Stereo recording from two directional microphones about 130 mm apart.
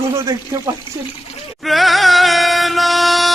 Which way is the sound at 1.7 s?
Centre (ahead or behind).